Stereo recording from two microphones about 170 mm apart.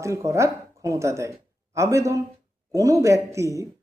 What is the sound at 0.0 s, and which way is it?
A woman's voice, 15° right (ahead or behind).